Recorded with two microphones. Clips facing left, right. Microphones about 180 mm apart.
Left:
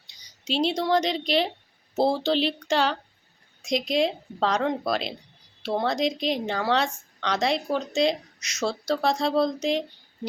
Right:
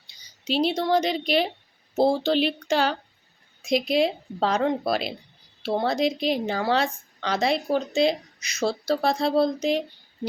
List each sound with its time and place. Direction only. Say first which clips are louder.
0.1 s speech: right 2 dB; centre (ahead or behind)